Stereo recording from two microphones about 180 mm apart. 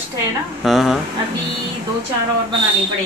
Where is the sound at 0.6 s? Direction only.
Centre (ahead or behind).